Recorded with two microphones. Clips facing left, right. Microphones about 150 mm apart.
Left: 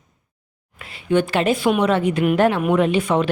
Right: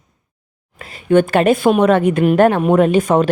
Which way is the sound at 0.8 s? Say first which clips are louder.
Right 6 dB; 45° right (ahead or behind).